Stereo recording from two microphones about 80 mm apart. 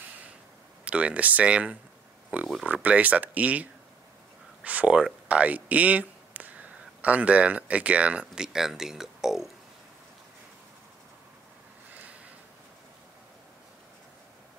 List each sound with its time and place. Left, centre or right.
0.8 s speech: centre
4.6 s speech: centre